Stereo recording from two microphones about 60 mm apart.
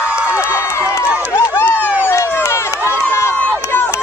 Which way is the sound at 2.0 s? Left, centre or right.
Left.